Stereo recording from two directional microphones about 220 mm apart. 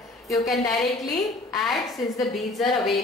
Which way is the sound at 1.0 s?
15° left (ahead or behind).